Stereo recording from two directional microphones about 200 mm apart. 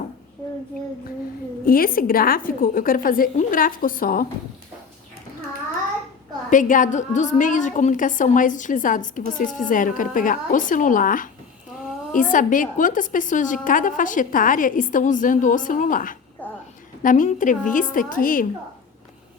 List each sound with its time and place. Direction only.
1.6 s a woman's voice: 45° left (ahead or behind)
6.5 s a woman's voice: 40° left (ahead or behind)
16.4 s a sound: 10° left (ahead or behind)
17.0 s a woman's voice: 40° left (ahead or behind)